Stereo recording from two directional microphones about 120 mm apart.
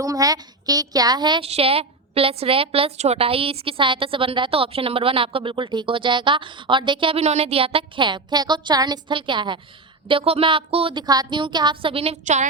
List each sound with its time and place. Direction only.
0.0 s a woman's voice: 30° right (ahead or behind)
1.4 s a woman's voice: 55° right (ahead or behind)
7.2 s a woman's voice: 60° right (ahead or behind); by 9.6 s 40° right (ahead or behind)
10.1 s a woman's voice: 50° right (ahead or behind)
10.9 s a woman's voice: 35° right (ahead or behind); by 12.1 s 50° right (ahead or behind)
12.2 s a woman's voice: 85° right